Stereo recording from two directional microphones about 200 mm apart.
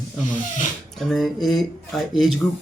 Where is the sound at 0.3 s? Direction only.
40° left (ahead or behind).